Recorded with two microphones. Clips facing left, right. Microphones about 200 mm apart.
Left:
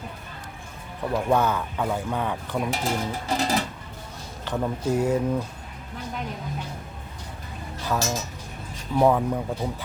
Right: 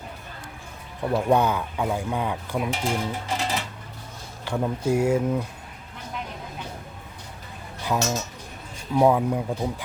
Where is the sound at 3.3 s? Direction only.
40° left (ahead or behind).